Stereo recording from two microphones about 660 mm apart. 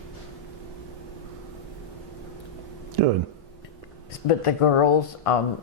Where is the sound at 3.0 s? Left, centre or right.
Right.